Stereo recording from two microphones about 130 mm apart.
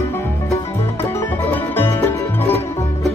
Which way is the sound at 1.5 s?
15° left (ahead or behind).